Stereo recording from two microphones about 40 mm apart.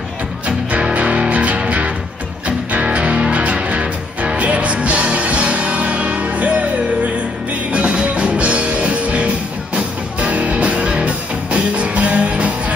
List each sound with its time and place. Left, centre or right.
0.9 s music: right
7.7 s music: right